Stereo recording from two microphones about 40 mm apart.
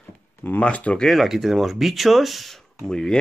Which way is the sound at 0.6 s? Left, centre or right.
Left.